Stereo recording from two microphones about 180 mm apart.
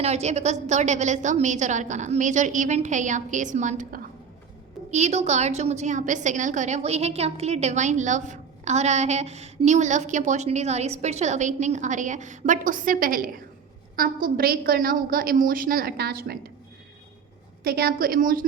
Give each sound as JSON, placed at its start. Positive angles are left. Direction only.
{"t": 0.0, "sound": "a woman's voice", "side_deg": -40}
{"t": 17.6, "sound": "a woman's voice", "side_deg": -55}